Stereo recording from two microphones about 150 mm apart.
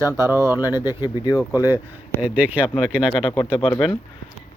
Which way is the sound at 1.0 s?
25° left (ahead or behind).